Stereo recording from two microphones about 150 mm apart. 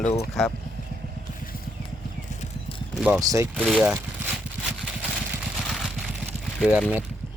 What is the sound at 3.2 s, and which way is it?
Speech, 20° right (ahead or behind).